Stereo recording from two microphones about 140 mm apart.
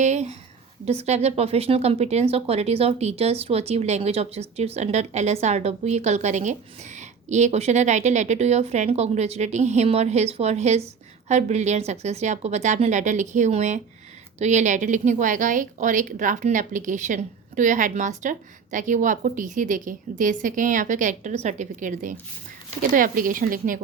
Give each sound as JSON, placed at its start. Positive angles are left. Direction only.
{"t": 0.0, "sound": "a woman's voice", "side_deg": -55}
{"t": 22.9, "sound": "a woman's voice", "side_deg": -75}